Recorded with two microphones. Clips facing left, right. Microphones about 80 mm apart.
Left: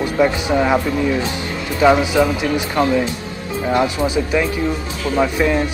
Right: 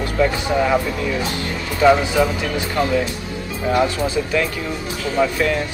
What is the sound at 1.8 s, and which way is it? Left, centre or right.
Speech, centre.